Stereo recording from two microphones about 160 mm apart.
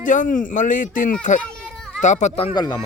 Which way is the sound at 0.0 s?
55° left (ahead or behind).